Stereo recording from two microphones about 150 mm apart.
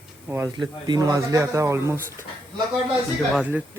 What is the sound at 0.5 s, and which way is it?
Speech, 30° right (ahead or behind).